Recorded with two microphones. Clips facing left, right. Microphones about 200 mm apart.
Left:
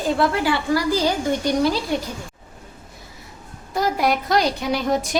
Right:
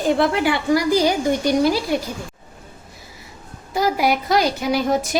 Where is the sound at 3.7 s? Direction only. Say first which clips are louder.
Right 2 dB; 5° right (ahead or behind).